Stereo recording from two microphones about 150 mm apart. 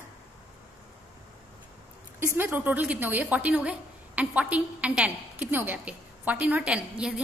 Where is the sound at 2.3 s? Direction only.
15° right (ahead or behind).